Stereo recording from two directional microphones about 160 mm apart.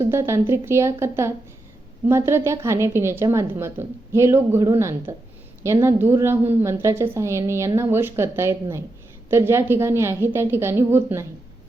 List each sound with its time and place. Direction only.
0.0 s a woman's voice: 15° right (ahead or behind)